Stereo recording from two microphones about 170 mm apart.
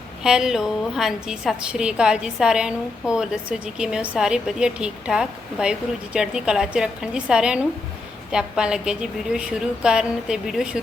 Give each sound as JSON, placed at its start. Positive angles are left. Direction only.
{"t": 0.2, "sound": "a woman's voice", "side_deg": -5}